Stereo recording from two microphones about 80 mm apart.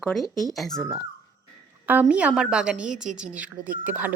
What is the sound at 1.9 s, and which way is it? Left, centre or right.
A woman's voice, centre.